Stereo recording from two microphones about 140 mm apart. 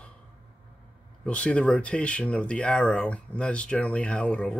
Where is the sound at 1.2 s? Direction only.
10° left (ahead or behind).